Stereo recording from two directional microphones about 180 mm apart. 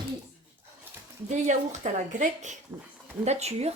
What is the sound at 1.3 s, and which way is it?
A woman's voice, 40° right (ahead or behind).